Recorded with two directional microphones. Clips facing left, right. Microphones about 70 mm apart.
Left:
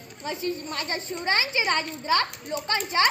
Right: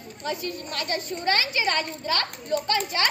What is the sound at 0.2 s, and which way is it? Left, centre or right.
A woman's voice, left.